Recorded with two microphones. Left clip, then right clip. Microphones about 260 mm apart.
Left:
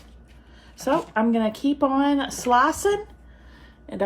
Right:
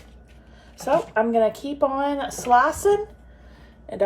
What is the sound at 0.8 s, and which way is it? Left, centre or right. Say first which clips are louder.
A woman's voice: right 2 dB; left.